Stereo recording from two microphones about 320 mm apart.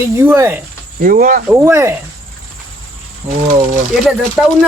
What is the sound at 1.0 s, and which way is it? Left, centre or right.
Speech, right.